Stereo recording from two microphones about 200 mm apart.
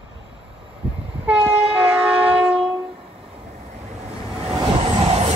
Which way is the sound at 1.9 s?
5° right (ahead or behind).